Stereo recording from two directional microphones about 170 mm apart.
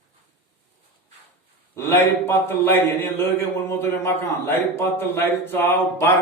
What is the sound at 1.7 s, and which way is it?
A man's voice, 15° left (ahead or behind).